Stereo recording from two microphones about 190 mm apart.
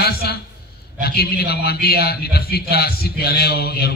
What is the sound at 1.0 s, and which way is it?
A man's voice, 55° left (ahead or behind).